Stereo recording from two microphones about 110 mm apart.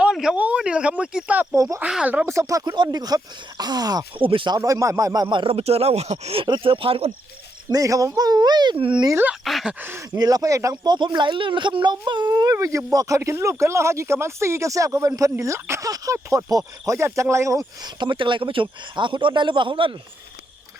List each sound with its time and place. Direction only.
0.0 s speech: 5° right (ahead or behind)
2.3 s speech: 30° right (ahead or behind)
4.2 s a man's voice: 50° right (ahead or behind)
4.5 s a man's voice: 30° right (ahead or behind); by 6.4 s 70° right (ahead or behind)
6.4 s a man's voice: 50° right (ahead or behind)
7.7 s speech: 30° right (ahead or behind); by 9.0 s 50° right (ahead or behind)
9.4 s speech: centre (ahead or behind)
9.8 s speech: 20° right (ahead or behind)
10.2 s speech: 35° right (ahead or behind)
10.9 s speech: 45° right (ahead or behind)
18.0 s a man's voice: 45° right (ahead or behind)